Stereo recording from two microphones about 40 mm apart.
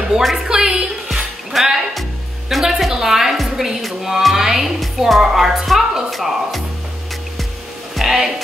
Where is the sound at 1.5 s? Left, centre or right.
Centre.